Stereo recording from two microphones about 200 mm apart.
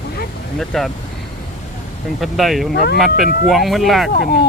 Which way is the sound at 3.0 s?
Centre (ahead or behind).